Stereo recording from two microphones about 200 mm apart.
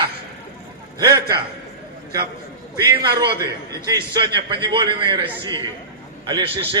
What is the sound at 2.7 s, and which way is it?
Speech, 20° right (ahead or behind).